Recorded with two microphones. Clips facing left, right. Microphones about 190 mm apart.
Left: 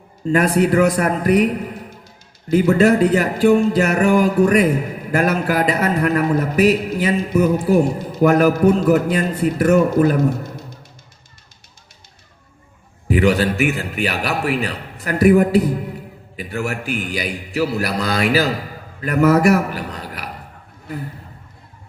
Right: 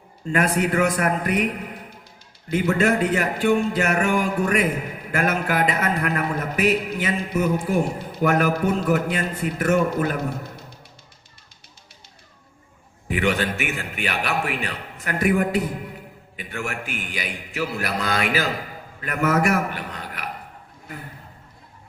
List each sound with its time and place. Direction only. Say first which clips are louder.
0.3 s a man's voice: left 6 dB; 35° left (ahead or behind)
2.5 s a man's voice: left 7 dB; 35° left (ahead or behind)
13.1 s a man's voice: left 7 dB; 35° left (ahead or behind)